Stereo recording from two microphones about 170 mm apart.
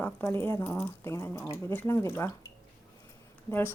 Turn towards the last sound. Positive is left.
turn(degrees=15)  # may be behind; listen again after turning